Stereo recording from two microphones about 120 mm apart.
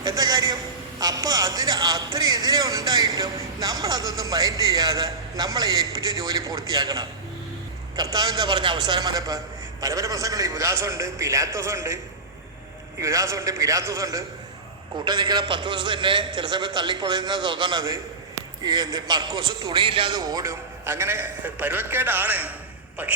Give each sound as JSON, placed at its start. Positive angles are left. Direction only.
{"t": 0.0, "sound": "a man's voice", "side_deg": -35}
{"t": 8.1, "sound": "a man's voice", "side_deg": -35}
{"t": 13.0, "sound": "a man's voice", "side_deg": -25}